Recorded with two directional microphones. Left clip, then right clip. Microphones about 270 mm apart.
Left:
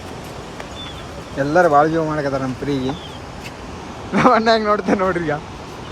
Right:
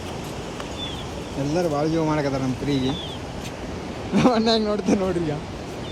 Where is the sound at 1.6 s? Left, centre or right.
Centre.